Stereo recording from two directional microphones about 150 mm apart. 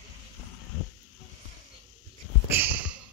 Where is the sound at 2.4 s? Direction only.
15° right (ahead or behind).